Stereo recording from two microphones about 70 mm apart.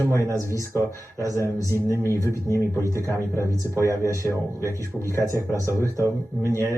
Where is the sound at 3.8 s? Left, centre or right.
Right.